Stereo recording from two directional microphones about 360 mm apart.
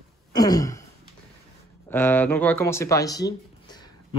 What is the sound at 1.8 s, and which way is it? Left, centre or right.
Speech, centre.